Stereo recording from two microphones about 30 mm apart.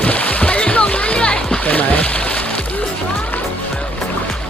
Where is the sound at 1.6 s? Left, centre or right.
Left.